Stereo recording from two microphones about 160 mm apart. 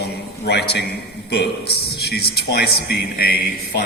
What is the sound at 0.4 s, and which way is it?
A man's voice, 90° left.